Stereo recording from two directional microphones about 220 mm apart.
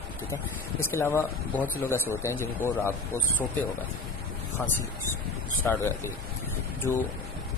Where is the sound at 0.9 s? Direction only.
10° left (ahead or behind).